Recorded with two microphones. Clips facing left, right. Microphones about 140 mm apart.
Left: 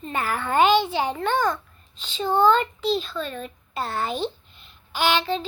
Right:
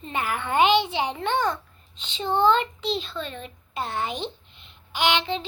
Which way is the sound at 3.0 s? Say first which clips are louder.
Left 3 dB; 25° right (ahead or behind).